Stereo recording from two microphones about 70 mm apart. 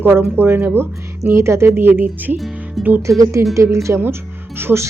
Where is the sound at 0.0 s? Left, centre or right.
Right.